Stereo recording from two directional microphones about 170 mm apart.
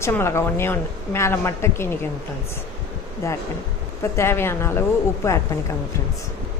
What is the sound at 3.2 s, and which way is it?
Speech, 15° left (ahead or behind).